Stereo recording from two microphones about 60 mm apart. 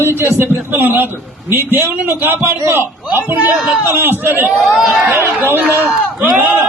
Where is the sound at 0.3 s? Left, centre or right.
Right.